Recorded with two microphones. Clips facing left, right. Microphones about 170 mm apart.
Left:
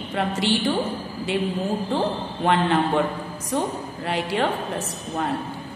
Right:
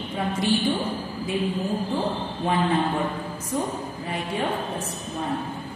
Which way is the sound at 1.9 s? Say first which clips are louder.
Left 2 dB; 80° left.